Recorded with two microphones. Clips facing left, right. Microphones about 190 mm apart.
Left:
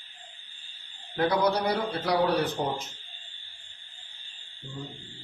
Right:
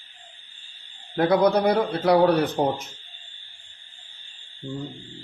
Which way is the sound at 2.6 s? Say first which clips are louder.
Right 7 dB; 75° right (ahead or behind).